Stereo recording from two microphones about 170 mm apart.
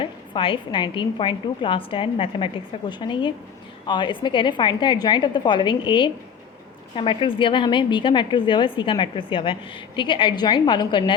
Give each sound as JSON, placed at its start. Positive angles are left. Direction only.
{"t": 0.0, "sound": "a woman's voice", "side_deg": 30}